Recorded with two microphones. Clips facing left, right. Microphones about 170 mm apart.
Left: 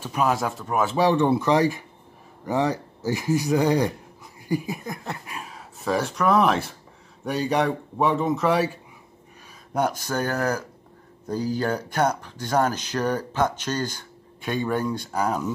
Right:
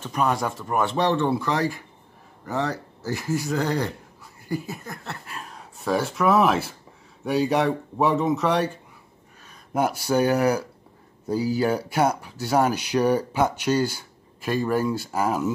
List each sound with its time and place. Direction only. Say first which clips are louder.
0.0 s speech: left 1 dB; 5° left (ahead or behind)
4.5 s a sound: left 3 dB; 15° left (ahead or behind)
5.5 s speech: right 1 dB; centre (ahead or behind)
9.8 s speech: right 3 dB; 10° right (ahead or behind)